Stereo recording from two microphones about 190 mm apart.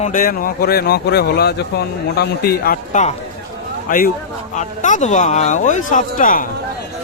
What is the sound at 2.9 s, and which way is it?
Speech, 35° left (ahead or behind).